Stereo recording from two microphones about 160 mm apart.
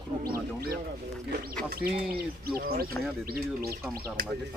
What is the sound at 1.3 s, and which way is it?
Speech, 70° right (ahead or behind).